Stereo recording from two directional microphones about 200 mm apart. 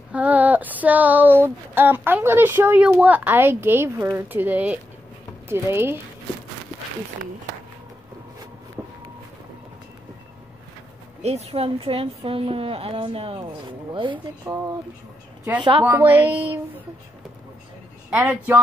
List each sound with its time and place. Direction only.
0.1 s speech: 5° right (ahead or behind)
11.2 s a woman's voice: 30° right (ahead or behind)
14.4 s speech: 15° right (ahead or behind)
15.8 s speech: 10° right (ahead or behind)
18.1 s speech: 5° right (ahead or behind)